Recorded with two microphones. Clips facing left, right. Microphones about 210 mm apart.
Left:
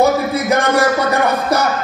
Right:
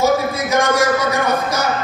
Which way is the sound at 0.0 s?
60° left (ahead or behind).